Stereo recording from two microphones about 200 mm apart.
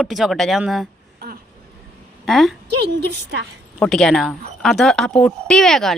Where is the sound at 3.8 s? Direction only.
Centre (ahead or behind).